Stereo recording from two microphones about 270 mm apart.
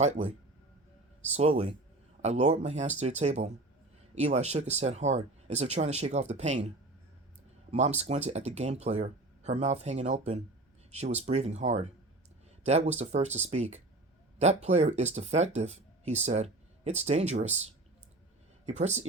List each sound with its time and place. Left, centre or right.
0.0 s speech: right
7.7 s speech: right